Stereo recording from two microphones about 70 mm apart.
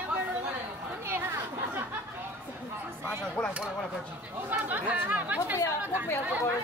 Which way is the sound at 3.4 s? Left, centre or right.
Centre.